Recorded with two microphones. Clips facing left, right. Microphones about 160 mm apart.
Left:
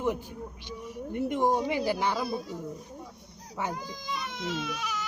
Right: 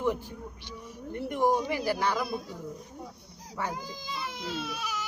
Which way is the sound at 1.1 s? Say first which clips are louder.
Even; 20° left (ahead or behind).